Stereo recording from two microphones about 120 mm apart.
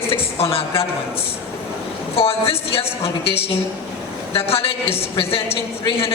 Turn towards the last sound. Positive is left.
turn(degrees=50)  # may be behind; listen again after turning